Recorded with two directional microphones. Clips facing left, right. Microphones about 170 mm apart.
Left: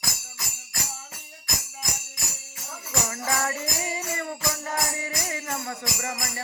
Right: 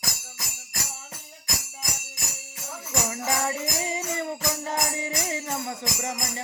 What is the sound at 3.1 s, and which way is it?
Music, 20° right (ahead or behind).